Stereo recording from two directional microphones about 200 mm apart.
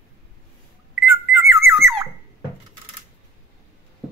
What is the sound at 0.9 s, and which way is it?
Alarm clock, centre (ahead or behind).